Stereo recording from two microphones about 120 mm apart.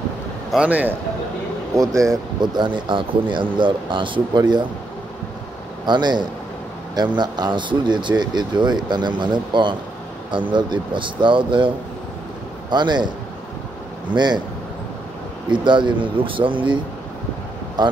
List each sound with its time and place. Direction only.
0.5 s a man's voice: 10° right (ahead or behind)
2.0 s speech: 30° right (ahead or behind)
5.9 s speech: 40° right (ahead or behind)
14.1 s speech: 40° right (ahead or behind)
15.5 s speech: 40° right (ahead or behind)